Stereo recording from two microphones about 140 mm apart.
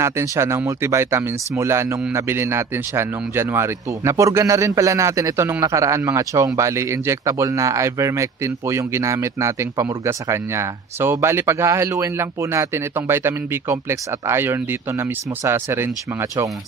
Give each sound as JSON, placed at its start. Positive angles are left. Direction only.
{"t": 0.0, "sound": "speech", "side_deg": -20}